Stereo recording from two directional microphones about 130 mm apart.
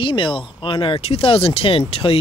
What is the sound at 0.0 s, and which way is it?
Speech, 40° left (ahead or behind).